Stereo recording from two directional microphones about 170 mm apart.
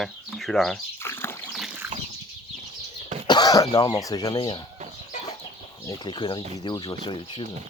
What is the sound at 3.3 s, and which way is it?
Speech, 25° left (ahead or behind).